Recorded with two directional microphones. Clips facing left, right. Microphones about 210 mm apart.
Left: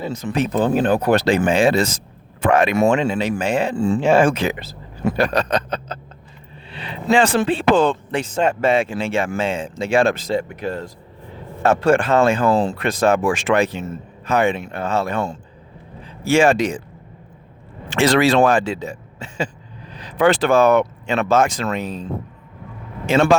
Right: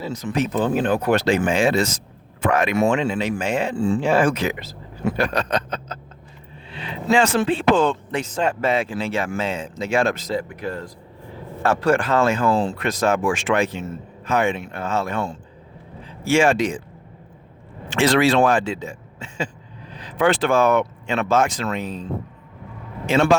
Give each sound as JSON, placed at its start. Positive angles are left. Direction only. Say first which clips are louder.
{"t": 0.1, "sound": "speech", "louder": "left 1 dB", "side_deg": 30}
{"t": 2.7, "sound": "speech", "louder": "left 2 dB", "side_deg": 40}
{"t": 3.9, "sound": "speech", "louder": "left 4 dB", "side_deg": 25}
{"t": 7.3, "sound": "speech", "louder": "left 1 dB", "side_deg": 30}
{"t": 17.8, "sound": "speech", "louder": "left 2 dB", "side_deg": 40}
{"t": 20.0, "sound": "speech", "louder": "left 3 dB", "side_deg": 40}
{"t": 23.0, "sound": "speech", "louder": "left 2 dB", "side_deg": 45}